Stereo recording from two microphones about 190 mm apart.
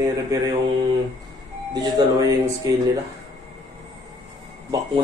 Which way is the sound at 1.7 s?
20° right (ahead or behind).